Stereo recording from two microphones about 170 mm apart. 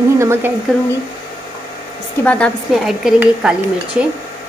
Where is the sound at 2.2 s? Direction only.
5° left (ahead or behind).